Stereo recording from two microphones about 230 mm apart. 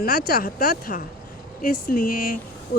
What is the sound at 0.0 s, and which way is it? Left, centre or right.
Speech, left.